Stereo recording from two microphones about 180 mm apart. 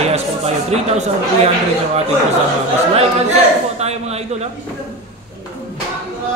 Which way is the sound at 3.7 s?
35° right (ahead or behind).